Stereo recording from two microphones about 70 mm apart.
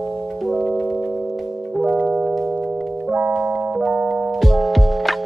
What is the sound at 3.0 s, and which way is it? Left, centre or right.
Music, centre.